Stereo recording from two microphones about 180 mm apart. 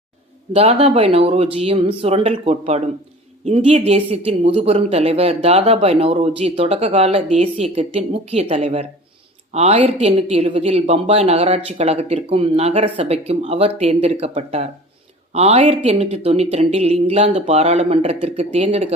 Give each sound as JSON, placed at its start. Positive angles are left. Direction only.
{"t": 0.5, "sound": "speech", "side_deg": -35}